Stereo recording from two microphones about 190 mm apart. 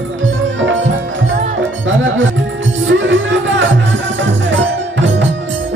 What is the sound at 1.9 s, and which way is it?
Music, 85° right.